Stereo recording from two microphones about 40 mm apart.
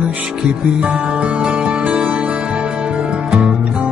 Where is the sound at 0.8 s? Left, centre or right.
Right.